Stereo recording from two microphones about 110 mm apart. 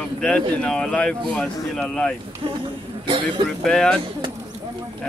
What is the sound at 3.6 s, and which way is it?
Speech, 5° left (ahead or behind).